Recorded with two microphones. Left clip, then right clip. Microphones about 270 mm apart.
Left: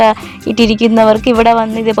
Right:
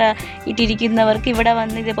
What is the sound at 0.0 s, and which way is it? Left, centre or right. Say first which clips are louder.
Speech: left 7 dB; left.